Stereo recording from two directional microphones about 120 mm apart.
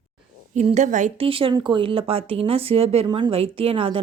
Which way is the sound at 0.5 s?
75° right (ahead or behind).